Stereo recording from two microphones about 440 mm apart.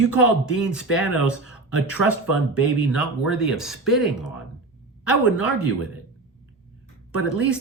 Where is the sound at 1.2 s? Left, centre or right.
Right.